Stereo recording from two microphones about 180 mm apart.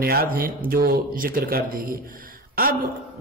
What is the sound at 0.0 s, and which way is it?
Speech, 55° right (ahead or behind).